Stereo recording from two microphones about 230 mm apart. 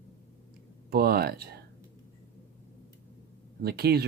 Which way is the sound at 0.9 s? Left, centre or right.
Right.